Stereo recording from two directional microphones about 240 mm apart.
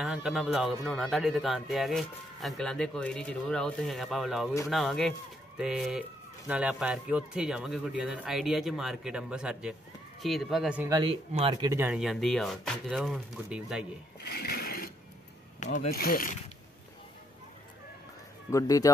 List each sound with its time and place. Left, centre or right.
0.0 s speech: centre
14.2 s sewing machine: left
15.6 s speech: left
18.5 s speech: centre